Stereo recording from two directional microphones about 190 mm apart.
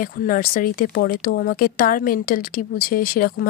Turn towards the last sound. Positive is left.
turn(degrees=50)  # may be behind; listen again after turning